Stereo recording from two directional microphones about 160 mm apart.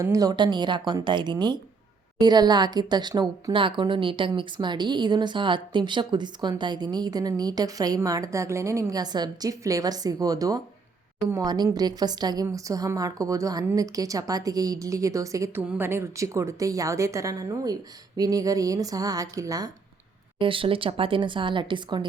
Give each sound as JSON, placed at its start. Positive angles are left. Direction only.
{"t": 0.0, "sound": "a woman's voice", "side_deg": -20}
{"t": 20.4, "sound": "speech", "side_deg": -35}